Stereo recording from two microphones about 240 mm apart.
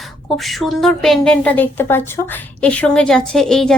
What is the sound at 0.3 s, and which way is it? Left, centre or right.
A woman's voice, centre.